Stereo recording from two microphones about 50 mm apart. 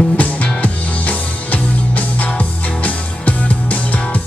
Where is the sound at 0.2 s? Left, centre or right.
Left.